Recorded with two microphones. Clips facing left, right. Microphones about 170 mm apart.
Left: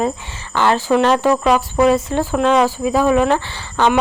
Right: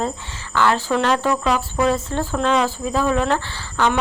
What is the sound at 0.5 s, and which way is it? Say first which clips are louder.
Speech: left 4 dB; 25° left (ahead or behind).